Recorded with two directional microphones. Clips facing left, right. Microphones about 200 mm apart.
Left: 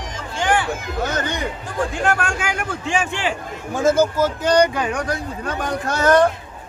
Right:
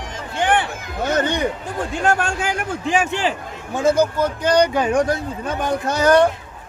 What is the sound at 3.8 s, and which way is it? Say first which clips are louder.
Speech: even; centre (ahead or behind).